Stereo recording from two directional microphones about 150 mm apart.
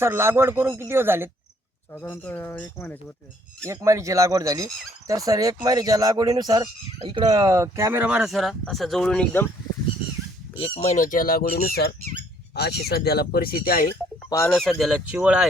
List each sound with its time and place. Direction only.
0.0 s speech: 15° right (ahead or behind)
1.9 s speech: 15° left (ahead or behind)
3.6 s speech: 20° right (ahead or behind); by 9.5 s 10° left (ahead or behind)
10.6 s speech: 40° left (ahead or behind)
10.9 s speech: 60° left (ahead or behind)
14.3 s speech: 20° left (ahead or behind)
14.5 s speech: centre (ahead or behind)